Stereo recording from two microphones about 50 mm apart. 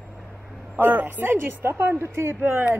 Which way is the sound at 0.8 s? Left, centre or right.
Right.